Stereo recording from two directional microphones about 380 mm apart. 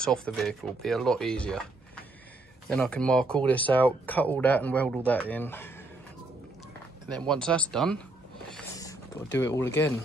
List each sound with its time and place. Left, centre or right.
0.0 s speech: centre
2.7 s speech: centre
7.2 s speech: centre
8.5 s a sound: centre